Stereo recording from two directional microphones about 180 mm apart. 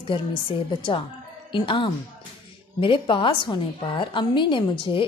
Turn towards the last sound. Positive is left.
turn(degrees=30)  # may be behind; listen again after turning